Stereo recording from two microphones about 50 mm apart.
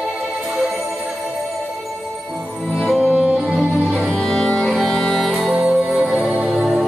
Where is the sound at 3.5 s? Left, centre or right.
Centre.